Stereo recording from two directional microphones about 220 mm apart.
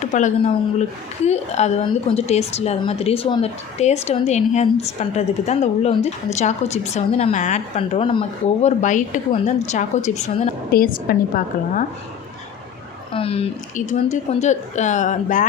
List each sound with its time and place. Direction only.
0.0 s a woman's voice: 35° left (ahead or behind)
13.1 s a woman's voice: 25° left (ahead or behind)